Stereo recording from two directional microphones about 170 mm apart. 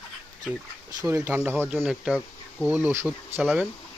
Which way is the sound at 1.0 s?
15° right (ahead or behind).